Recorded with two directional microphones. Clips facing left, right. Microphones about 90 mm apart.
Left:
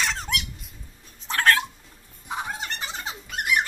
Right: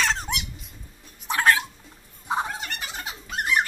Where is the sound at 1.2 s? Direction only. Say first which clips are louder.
Even; 15° right (ahead or behind).